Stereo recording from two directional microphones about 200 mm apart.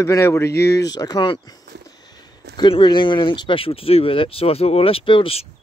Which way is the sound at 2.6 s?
20° left (ahead or behind).